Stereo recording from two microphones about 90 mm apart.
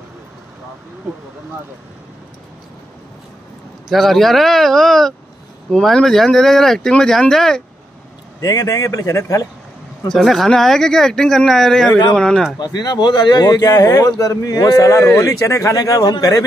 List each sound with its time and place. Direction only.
3.9 s speech: centre (ahead or behind)
8.4 s speech: 40° left (ahead or behind)
10.0 s speech: 5° left (ahead or behind)
12.5 s speech: 50° left (ahead or behind)